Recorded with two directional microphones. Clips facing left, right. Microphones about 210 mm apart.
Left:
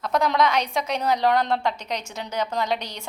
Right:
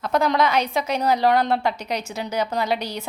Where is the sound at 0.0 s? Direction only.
Centre (ahead or behind).